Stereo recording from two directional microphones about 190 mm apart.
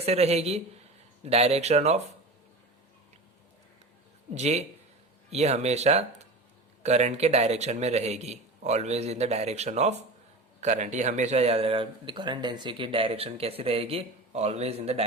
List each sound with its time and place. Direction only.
0.0 s speech: 35° right (ahead or behind)
4.4 s speech: 35° right (ahead or behind)